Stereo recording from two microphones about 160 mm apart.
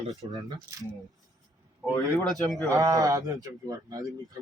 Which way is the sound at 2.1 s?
Centre (ahead or behind).